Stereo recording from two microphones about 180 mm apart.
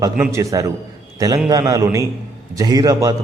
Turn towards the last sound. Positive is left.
turn(degrees=-20)  # may be behind; listen again after turning